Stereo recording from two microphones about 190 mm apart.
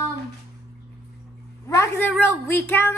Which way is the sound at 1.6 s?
15° left (ahead or behind).